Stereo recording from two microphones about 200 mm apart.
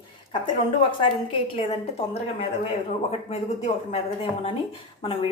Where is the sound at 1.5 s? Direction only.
30° left (ahead or behind).